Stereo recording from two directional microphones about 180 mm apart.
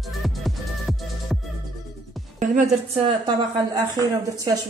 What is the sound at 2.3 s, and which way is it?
Music, 45° right (ahead or behind).